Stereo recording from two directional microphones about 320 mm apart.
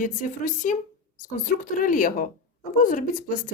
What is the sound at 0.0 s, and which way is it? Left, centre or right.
Speech, left.